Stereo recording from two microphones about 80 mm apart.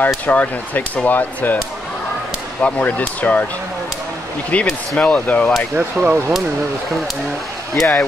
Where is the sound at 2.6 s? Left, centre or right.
Centre.